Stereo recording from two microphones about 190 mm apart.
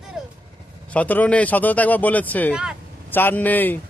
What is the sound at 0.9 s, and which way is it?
Speech, 10° left (ahead or behind).